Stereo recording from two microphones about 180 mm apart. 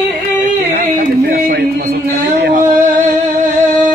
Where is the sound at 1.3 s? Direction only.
60° right (ahead or behind).